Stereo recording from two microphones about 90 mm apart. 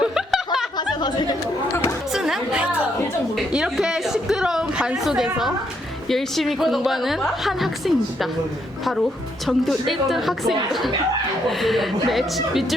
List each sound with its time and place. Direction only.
0.0 s snicker: 5° right (ahead or behind)
0.8 s speech: 50° left (ahead or behind)
2.1 s music: 5° right (ahead or behind)
3.3 s a woman's voice: 5° right (ahead or behind)
9.5 s a woman's voice: centre (ahead or behind)